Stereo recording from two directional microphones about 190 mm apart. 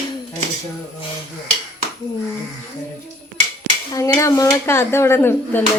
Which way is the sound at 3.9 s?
15° left (ahead or behind).